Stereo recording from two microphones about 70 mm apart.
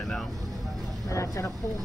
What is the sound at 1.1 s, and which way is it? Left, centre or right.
Speech, left.